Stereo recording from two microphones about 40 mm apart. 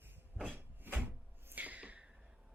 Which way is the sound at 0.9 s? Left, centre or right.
Right.